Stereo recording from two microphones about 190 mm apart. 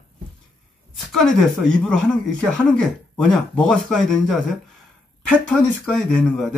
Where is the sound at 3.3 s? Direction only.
5° left (ahead or behind).